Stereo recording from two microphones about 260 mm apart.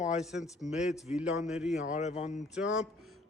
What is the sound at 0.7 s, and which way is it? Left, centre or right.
A man's voice, centre.